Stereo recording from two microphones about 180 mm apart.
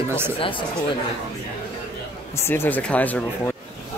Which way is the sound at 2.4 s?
10° left (ahead or behind).